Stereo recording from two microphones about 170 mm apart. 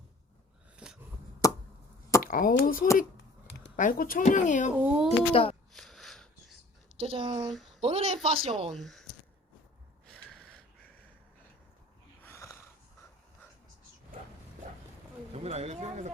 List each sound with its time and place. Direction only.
0.8 s a sound: 5° right (ahead or behind)
1.4 s chop: 20° left (ahead or behind)
2.2 s speech: 55° left (ahead or behind)
4.8 s speech: 10° right (ahead or behind)
5.3 s speech: 35° left (ahead or behind)
5.7 s wheeze: centre (ahead or behind)
6.9 s speech: 30° right (ahead or behind)
8.7 s speech: centre (ahead or behind)
12.2 s wheeze: 15° left (ahead or behind)
15.3 s speech: 40° right (ahead or behind)